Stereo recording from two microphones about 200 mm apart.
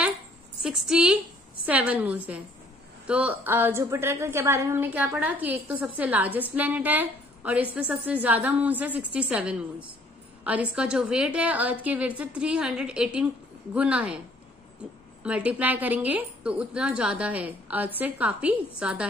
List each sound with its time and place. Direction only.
0.6 s a woman's voice: 5° right (ahead or behind)
15.2 s a woman's voice: 5° right (ahead or behind)